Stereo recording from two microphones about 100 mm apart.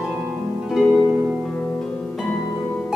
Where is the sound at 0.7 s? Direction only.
5° left (ahead or behind).